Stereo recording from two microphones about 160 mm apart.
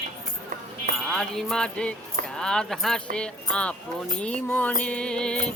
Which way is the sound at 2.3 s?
5° left (ahead or behind).